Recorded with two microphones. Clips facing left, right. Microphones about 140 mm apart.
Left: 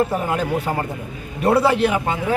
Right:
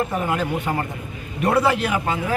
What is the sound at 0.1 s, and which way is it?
A man's voice, 30° left (ahead or behind).